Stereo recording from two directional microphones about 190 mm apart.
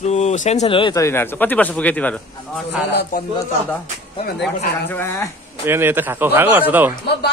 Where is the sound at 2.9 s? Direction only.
55° left (ahead or behind).